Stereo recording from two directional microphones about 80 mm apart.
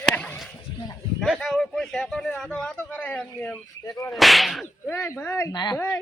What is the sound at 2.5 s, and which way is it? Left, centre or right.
Speech, centre.